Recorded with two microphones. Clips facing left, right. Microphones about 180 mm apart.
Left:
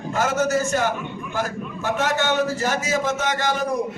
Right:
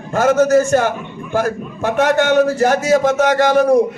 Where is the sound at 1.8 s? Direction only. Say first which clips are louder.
Right 8 dB; 50° right (ahead or behind).